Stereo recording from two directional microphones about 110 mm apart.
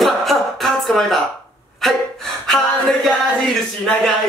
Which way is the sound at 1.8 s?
5° left (ahead or behind).